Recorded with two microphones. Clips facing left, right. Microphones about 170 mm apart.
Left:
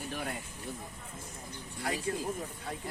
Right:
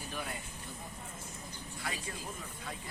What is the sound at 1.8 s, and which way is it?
Speech, 50° left (ahead or behind).